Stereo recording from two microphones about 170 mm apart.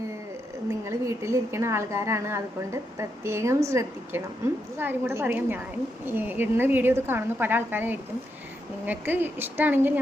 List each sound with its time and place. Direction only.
0.7 s a woman's voice: 15° right (ahead or behind)